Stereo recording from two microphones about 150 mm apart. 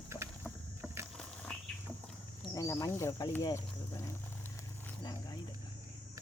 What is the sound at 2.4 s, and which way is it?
Speech, 25° left (ahead or behind).